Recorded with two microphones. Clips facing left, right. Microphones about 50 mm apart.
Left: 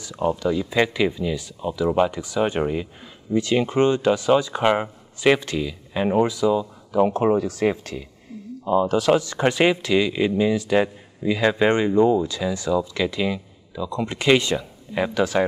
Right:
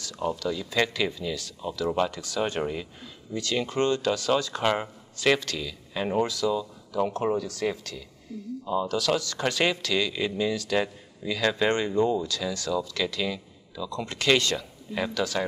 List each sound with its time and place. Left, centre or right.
0.0 s speech: left